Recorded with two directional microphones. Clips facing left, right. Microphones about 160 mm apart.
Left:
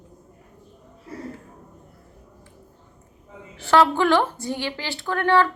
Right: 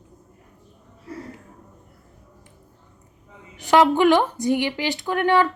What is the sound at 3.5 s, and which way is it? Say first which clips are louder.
A woman's voice: right 2 dB; 15° right (ahead or behind).